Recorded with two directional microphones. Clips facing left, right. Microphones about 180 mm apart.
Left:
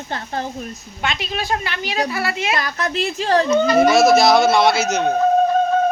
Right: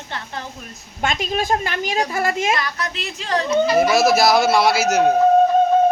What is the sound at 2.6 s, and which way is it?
Speech, 45° left (ahead or behind).